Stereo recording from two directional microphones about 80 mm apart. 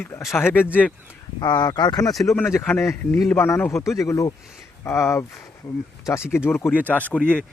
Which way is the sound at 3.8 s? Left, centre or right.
Left.